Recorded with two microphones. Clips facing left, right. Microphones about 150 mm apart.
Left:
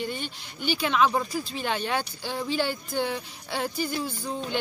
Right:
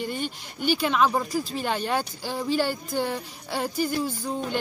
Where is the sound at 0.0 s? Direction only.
45° right (ahead or behind).